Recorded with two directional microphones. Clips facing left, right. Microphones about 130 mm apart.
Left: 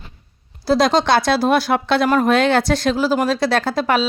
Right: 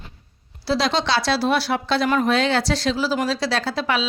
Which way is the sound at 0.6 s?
45° left (ahead or behind).